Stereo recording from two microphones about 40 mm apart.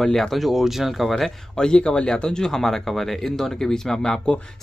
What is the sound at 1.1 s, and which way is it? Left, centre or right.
Speech, centre.